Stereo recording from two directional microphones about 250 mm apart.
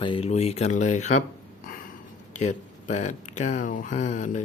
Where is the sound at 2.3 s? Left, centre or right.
Left.